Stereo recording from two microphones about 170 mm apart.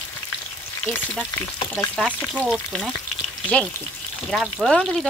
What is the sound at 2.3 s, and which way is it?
Frying, 5° right (ahead or behind).